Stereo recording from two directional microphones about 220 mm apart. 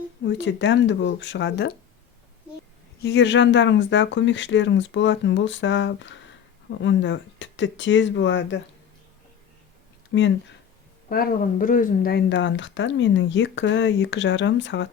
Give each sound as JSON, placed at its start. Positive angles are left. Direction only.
{"t": 0.3, "sound": "speech", "side_deg": 55}
{"t": 3.0, "sound": "speech", "side_deg": 55}
{"t": 10.1, "sound": "speech", "side_deg": 55}
{"t": 11.1, "sound": "speech", "side_deg": 40}